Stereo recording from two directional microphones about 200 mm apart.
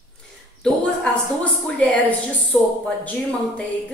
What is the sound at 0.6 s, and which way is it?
A woman's voice, 5° left (ahead or behind).